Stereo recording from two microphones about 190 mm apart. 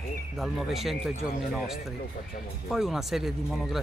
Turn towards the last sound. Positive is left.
turn(degrees=0)  # may be behind; listen again after turning